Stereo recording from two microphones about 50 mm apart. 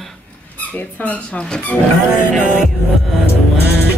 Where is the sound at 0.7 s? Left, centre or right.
Left.